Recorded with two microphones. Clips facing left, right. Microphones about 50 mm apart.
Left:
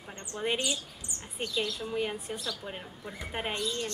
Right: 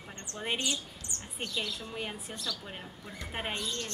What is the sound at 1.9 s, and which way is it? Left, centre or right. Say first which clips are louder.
Speech: left 6 dB; centre.